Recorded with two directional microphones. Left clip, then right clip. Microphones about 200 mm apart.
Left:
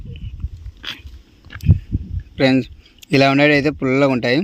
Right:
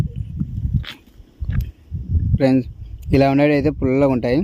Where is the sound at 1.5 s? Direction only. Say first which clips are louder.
Right 3 dB; 40° left (ahead or behind).